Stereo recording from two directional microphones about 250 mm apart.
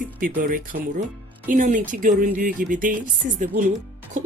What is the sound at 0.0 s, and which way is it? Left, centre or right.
A woman's voice, right.